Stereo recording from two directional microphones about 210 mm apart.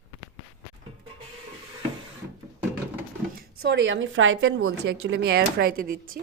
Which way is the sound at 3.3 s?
50° right (ahead or behind).